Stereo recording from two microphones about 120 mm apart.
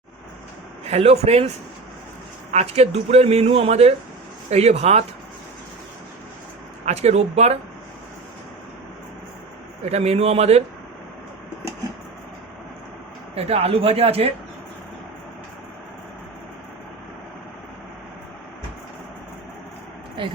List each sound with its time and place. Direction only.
0.9 s speech: 60° right (ahead or behind)
2.5 s speech: 65° right (ahead or behind)
6.8 s speech: 65° right (ahead or behind)
9.8 s speech: 60° right (ahead or behind)
13.3 s speech: 60° right (ahead or behind)